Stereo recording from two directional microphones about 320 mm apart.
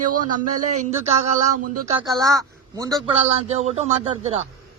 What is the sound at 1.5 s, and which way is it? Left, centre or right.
Speech, right.